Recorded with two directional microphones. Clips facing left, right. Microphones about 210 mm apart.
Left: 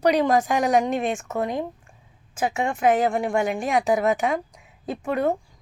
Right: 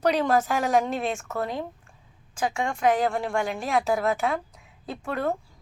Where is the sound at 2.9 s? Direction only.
15° left (ahead or behind).